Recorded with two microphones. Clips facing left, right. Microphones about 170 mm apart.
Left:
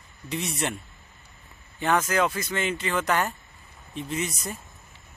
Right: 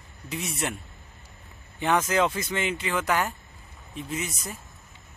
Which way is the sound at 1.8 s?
15° right (ahead or behind).